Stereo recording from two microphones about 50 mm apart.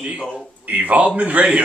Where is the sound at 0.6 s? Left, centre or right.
Right.